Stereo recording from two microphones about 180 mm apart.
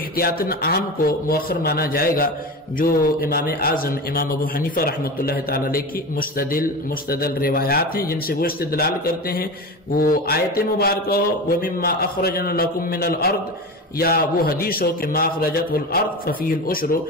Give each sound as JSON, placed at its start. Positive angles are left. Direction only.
{"t": 0.2, "sound": "a man's voice", "side_deg": 55}